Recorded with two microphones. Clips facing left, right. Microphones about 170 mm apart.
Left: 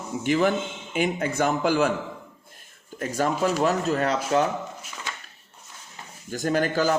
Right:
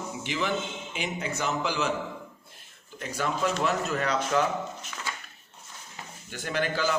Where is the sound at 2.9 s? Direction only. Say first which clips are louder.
Left 6 dB; 45° left (ahead or behind).